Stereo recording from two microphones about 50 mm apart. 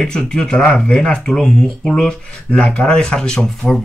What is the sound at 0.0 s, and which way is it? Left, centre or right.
Speech, centre.